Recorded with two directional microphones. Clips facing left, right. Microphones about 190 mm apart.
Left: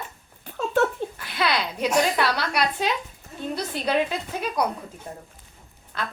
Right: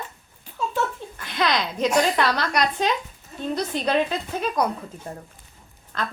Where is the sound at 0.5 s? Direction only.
60° left (ahead or behind).